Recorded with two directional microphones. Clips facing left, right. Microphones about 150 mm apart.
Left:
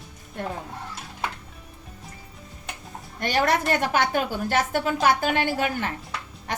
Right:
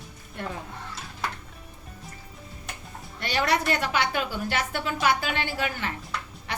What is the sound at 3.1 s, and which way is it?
A woman's voice, 50° left (ahead or behind).